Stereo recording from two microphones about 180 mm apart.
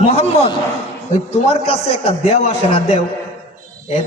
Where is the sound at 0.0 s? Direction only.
35° left (ahead or behind).